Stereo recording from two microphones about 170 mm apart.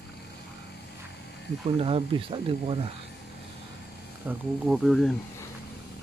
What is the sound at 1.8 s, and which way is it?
Speech, 35° right (ahead or behind).